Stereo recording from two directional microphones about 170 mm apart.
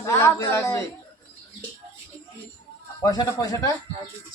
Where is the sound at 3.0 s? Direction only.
20° left (ahead or behind).